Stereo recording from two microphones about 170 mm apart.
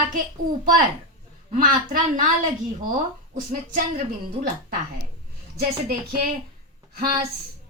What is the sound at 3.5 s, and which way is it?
Speech, 55° right (ahead or behind).